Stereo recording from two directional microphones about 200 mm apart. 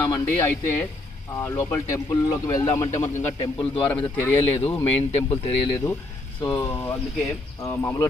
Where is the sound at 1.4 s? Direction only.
10° left (ahead or behind).